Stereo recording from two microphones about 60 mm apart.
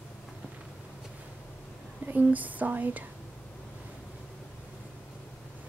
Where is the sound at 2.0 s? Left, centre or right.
Right.